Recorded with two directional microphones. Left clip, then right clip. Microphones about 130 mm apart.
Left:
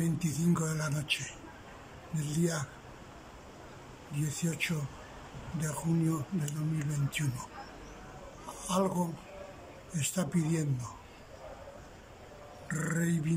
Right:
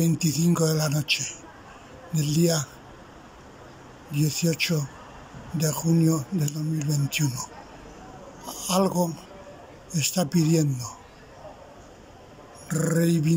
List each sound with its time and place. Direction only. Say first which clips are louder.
0.2 s speech: right 10 dB; 30° right (ahead or behind)
4.2 s speech: right 10 dB; 30° right (ahead or behind)
8.5 s speech: right 7 dB; 30° right (ahead or behind)
12.6 s speech: right 10 dB; 30° right (ahead or behind)